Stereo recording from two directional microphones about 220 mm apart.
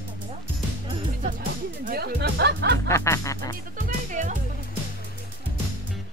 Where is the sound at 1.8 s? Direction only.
45° right (ahead or behind).